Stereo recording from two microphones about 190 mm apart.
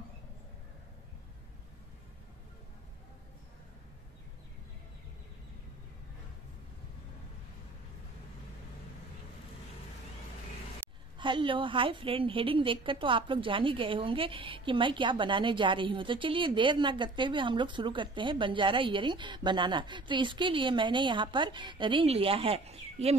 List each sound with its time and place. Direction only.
11.1 s a woman's voice: 25° right (ahead or behind)